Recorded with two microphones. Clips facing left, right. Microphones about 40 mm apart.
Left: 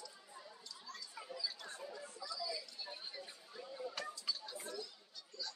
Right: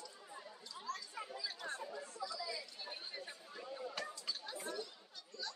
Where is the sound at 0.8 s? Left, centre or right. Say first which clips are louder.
Right 8 dB; right.